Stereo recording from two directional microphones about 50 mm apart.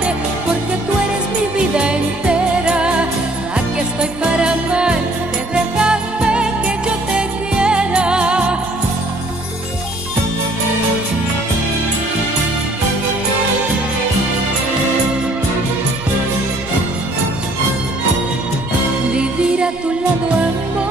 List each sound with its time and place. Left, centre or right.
1.8 s music: centre
19.1 s music: right